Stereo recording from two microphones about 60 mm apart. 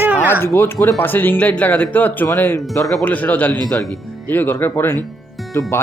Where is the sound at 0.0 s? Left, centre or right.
Right.